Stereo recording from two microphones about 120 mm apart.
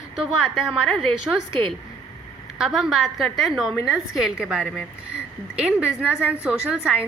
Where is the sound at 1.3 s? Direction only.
10° right (ahead or behind).